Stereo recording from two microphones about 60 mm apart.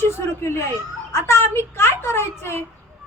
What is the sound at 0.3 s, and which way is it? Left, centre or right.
A woman's voice, left.